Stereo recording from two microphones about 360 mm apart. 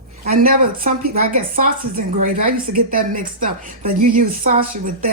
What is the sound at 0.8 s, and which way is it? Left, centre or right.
A woman's voice, right.